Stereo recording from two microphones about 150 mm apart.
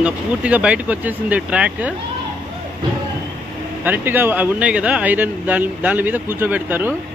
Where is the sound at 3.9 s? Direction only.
15° right (ahead or behind).